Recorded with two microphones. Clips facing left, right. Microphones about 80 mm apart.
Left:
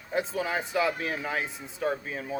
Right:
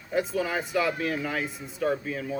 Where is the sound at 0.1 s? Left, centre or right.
Left.